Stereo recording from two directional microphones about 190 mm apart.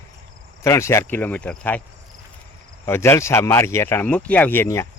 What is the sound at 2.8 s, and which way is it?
Speech, 10° left (ahead or behind).